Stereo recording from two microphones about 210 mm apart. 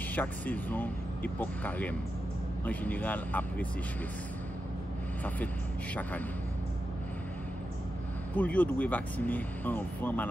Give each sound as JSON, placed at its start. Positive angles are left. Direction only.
{"t": 0.1, "sound": "speech", "side_deg": 10}
{"t": 8.4, "sound": "speech", "side_deg": 5}